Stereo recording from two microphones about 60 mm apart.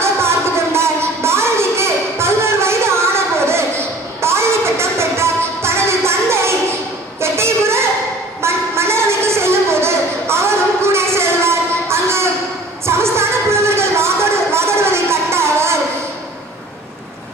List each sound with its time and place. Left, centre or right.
0.0 s music: right
7.2 s a sound: right
12.8 s music: right